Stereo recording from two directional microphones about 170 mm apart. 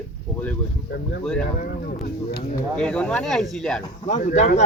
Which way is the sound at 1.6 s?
65° left (ahead or behind).